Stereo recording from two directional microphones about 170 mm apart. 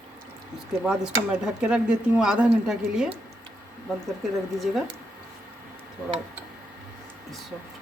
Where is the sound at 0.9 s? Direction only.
5° right (ahead or behind).